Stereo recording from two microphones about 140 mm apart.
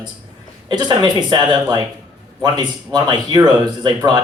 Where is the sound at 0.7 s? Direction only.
30° right (ahead or behind).